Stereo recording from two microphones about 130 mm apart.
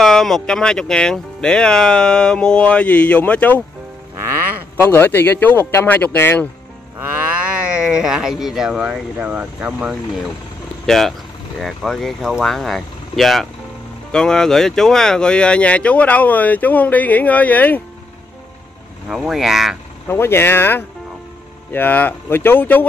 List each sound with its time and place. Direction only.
0.0 s speech: 5° left (ahead or behind)
4.8 s speech: 15° left (ahead or behind)
7.7 s speech: 5° right (ahead or behind)
10.9 s speech: centre (ahead or behind)
19.0 s speech: 5° right (ahead or behind)
20.1 s speech: 20° left (ahead or behind)